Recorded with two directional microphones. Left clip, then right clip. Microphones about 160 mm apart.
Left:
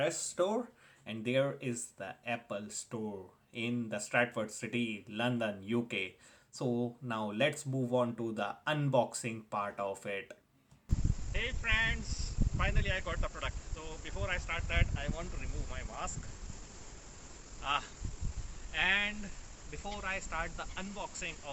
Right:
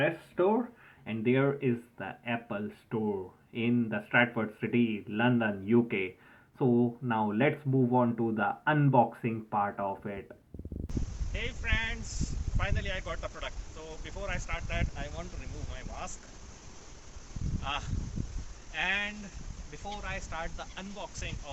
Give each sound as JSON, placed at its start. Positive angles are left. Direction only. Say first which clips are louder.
{"t": 0.0, "sound": "speech", "louder": "right 4 dB", "side_deg": 20}
{"t": 11.3, "sound": "a sound", "louder": "left 1 dB", "side_deg": 0}
{"t": 12.5, "sound": "speech", "louder": "even", "side_deg": -5}
{"t": 17.6, "sound": "speech", "louder": "left 2 dB", "side_deg": -5}